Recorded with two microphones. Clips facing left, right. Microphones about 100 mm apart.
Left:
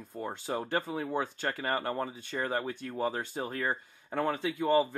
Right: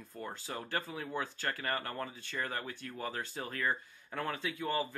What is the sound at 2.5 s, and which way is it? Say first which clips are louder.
Speech: left 7 dB; 35° left (ahead or behind).